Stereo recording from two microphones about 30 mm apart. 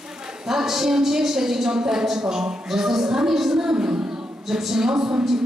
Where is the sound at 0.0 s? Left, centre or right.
Right.